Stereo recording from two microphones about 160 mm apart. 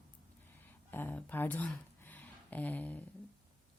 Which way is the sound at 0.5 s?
10° left (ahead or behind).